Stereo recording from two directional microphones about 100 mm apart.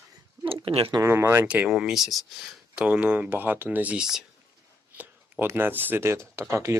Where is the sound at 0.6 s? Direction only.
65° right (ahead or behind).